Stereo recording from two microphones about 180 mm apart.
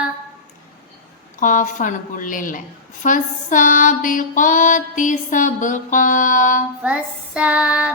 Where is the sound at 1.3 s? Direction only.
45° left (ahead or behind).